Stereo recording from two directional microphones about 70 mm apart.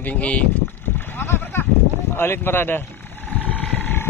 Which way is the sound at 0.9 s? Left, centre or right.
Left.